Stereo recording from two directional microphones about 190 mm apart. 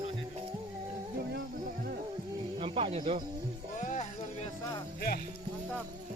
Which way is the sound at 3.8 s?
40° left (ahead or behind).